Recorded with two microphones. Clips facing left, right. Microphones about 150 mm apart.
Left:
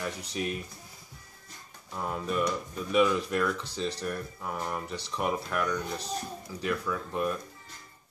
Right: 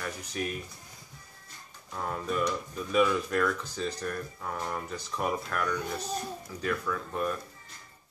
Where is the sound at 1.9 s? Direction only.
10° left (ahead or behind).